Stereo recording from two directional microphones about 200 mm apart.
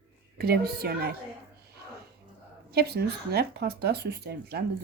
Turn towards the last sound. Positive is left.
turn(degrees=-55)  # may be behind; listen again after turning